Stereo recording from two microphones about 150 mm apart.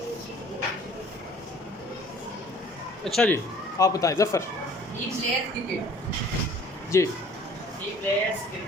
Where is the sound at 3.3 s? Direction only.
20° left (ahead or behind).